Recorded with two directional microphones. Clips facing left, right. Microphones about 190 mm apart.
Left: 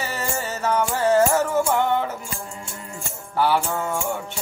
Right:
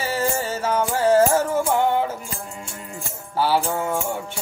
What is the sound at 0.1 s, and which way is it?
Music, 10° right (ahead or behind).